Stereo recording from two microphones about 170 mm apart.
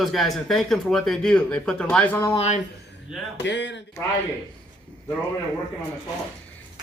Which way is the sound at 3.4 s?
90° left.